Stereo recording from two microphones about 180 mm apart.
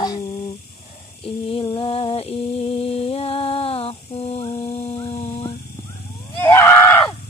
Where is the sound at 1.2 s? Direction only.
30° left (ahead or behind).